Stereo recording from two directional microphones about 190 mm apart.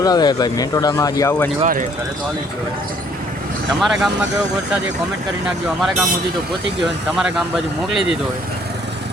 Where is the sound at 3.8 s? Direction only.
Centre (ahead or behind).